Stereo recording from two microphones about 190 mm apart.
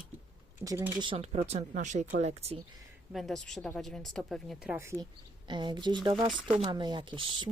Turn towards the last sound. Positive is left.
turn(degrees=-25)  # may be behind; listen again after turning